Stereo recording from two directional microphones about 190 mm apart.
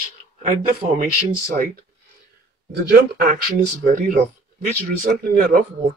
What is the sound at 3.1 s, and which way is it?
Speech, 50° right (ahead or behind).